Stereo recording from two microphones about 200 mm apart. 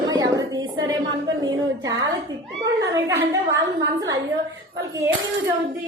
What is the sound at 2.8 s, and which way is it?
Speech, 15° right (ahead or behind).